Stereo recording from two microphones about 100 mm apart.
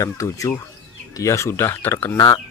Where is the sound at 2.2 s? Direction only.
45° left (ahead or behind).